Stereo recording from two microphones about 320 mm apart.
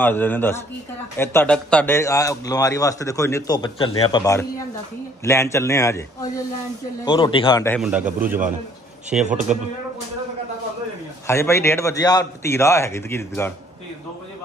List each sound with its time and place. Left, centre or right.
0.0 s a man's voice: centre
7.1 s a man's voice: centre
11.2 s a man's voice: centre